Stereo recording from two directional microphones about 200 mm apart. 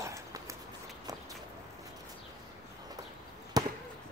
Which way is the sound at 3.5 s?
20° right (ahead or behind).